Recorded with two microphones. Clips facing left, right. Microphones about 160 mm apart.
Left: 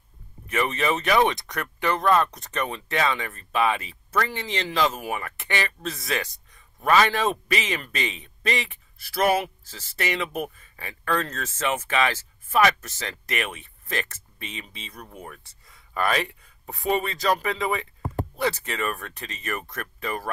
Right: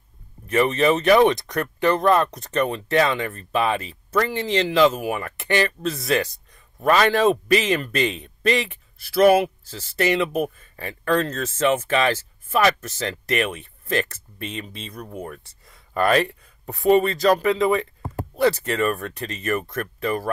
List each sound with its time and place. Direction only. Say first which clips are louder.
0.5 s speech: right 6 dB; 35° right (ahead or behind)
6.9 s speech: right 4 dB; 40° right (ahead or behind)
10.8 s speech: right 5 dB; 45° right (ahead or behind)
11.1 s speech: right 6 dB; 25° right (ahead or behind); by 16.3 s 50° right (ahead or behind)
16.3 s speech: right 5 dB; 35° right (ahead or behind)